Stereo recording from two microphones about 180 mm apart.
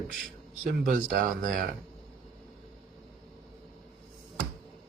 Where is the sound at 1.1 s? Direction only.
50° right (ahead or behind).